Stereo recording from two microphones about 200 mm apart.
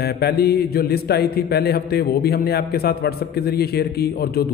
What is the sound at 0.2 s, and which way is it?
A man's voice, 50° left (ahead or behind).